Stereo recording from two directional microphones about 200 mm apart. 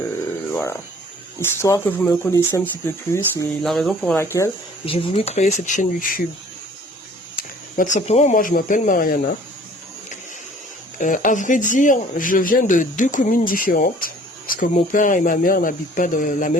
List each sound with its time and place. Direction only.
0.5 s a sound: 15° left (ahead or behind)
1.4 s speech: 15° left (ahead or behind)
3.6 s speech: centre (ahead or behind)
4.2 s speech: 15° left (ahead or behind)
4.9 s speech: 25° left (ahead or behind)
7.9 s speech: 35° left (ahead or behind)
10.9 s speech: 40° left (ahead or behind)